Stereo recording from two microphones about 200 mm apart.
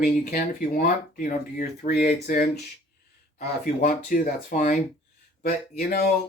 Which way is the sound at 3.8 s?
40° left (ahead or behind).